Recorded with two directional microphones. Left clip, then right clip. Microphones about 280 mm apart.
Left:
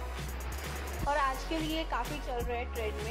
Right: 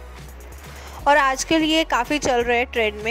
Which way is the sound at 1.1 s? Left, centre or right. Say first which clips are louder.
Right 15 dB; right.